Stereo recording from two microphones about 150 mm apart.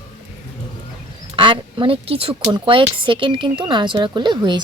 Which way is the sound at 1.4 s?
35° right (ahead or behind).